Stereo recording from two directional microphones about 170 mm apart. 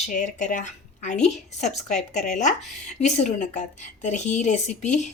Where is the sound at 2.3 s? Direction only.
45° left (ahead or behind).